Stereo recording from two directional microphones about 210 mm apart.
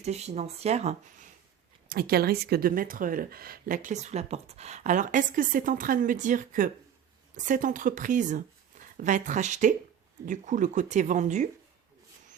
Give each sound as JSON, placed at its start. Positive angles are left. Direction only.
{"t": 0.0, "sound": "speech", "side_deg": -30}
{"t": 1.9, "sound": "speech", "side_deg": -45}